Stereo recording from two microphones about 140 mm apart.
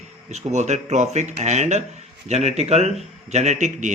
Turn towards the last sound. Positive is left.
turn(degrees=-60)  # may be behind; listen again after turning